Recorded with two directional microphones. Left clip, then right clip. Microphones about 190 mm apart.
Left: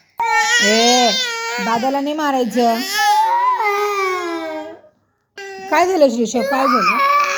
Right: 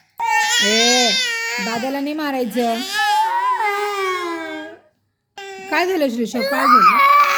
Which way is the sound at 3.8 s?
15° right (ahead or behind).